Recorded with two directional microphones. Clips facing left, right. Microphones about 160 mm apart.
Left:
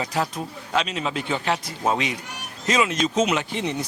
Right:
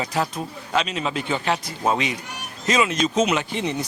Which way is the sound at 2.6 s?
10° right (ahead or behind).